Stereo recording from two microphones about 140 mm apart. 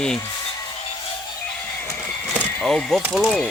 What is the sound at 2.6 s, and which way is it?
Speech, 5° left (ahead or behind).